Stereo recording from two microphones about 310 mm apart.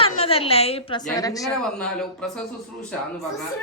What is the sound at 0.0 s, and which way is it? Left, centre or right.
A woman's voice, centre.